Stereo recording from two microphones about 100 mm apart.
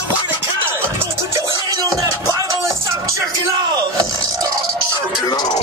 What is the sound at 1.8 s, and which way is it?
Music, 35° right (ahead or behind).